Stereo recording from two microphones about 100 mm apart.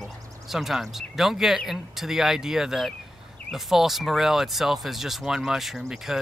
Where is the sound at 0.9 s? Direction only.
5° right (ahead or behind).